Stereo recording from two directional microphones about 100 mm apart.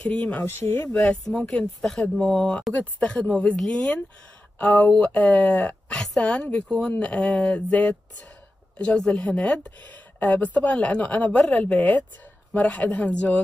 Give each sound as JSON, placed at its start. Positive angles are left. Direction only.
{"t": 0.1, "sound": "speech", "side_deg": 10}
{"t": 0.4, "sound": "speech", "side_deg": 25}
{"t": 0.9, "sound": "speech", "side_deg": 10}